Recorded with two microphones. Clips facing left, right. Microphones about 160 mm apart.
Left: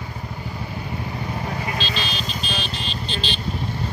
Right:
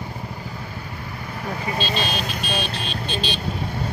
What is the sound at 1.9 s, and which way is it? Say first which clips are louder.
Vehicle: right 3 dB; 50° right (ahead or behind).